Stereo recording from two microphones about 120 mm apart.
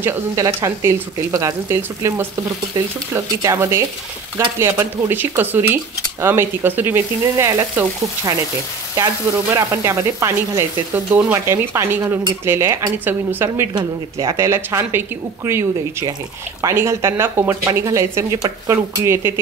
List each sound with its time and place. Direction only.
0.0 s speech: 20° right (ahead or behind)
8.9 s a woman's voice: 30° right (ahead or behind)
13.7 s speech: 30° right (ahead or behind)